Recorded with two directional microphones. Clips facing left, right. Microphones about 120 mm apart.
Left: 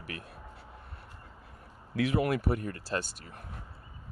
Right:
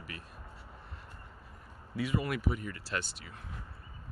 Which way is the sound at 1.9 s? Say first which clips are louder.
Left 5 dB; 75° left (ahead or behind).